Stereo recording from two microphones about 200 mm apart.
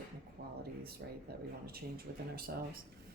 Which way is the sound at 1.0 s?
60° right (ahead or behind).